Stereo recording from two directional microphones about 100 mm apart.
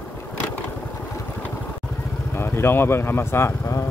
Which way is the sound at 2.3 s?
25° left (ahead or behind).